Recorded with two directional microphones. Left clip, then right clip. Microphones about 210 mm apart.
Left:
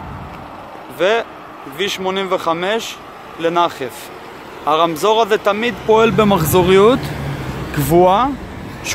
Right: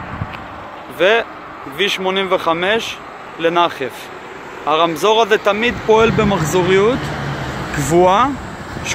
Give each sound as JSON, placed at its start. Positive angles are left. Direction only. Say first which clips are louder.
{"t": 0.9, "sound": "speech", "louder": "right 2 dB", "side_deg": 0}
{"t": 6.1, "sound": "speech", "louder": "left 2 dB", "side_deg": 20}
{"t": 7.7, "sound": "speech", "louder": "even", "side_deg": 15}